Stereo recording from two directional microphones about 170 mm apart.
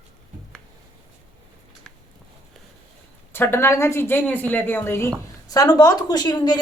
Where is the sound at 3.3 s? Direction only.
15° left (ahead or behind).